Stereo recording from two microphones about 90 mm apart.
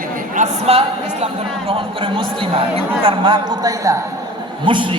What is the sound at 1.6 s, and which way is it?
Speech, 90° right.